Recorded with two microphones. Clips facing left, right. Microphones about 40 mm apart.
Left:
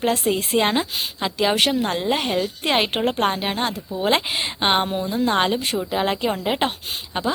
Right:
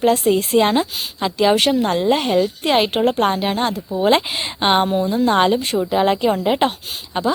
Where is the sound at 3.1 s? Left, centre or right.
Centre.